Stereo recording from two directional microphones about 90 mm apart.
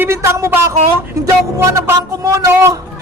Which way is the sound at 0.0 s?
25° right (ahead or behind).